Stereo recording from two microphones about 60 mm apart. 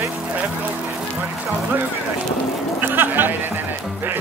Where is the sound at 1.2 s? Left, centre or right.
Right.